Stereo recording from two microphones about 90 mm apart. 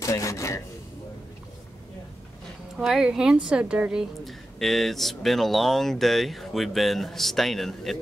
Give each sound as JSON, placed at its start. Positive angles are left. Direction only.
{"t": 0.0, "sound": "speech", "side_deg": 35}
{"t": 2.8, "sound": "speech", "side_deg": -5}
{"t": 4.2, "sound": "speech", "side_deg": 0}